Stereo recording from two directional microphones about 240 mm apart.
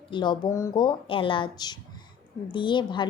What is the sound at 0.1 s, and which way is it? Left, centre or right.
A woman's voice, centre.